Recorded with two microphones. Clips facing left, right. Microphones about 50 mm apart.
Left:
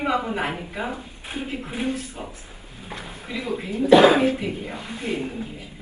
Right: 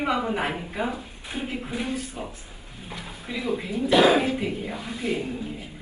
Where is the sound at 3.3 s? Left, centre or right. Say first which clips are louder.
Even; left.